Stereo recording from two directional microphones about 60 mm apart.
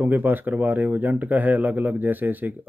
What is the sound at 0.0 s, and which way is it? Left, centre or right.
Speech, right.